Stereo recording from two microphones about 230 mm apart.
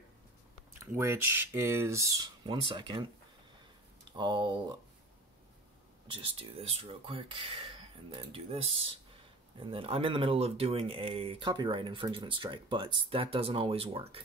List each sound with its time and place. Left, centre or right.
0.7 s speech: centre
4.2 s speech: centre
6.0 s speech: right